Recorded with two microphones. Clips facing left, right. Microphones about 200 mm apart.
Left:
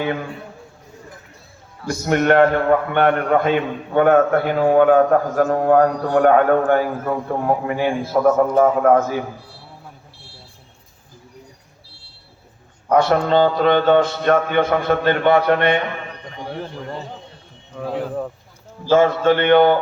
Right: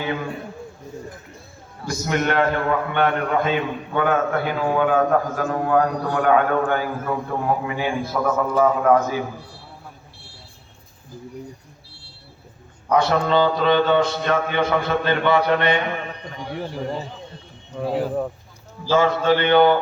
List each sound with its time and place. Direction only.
1.9 s a man's voice: 50° left (ahead or behind)
12.9 s a man's voice: 55° left (ahead or behind)
17.7 s speech: 10° right (ahead or behind)
18.9 s a man's voice: 50° left (ahead or behind)